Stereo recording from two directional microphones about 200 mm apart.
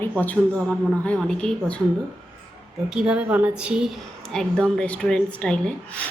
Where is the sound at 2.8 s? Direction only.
5° right (ahead or behind).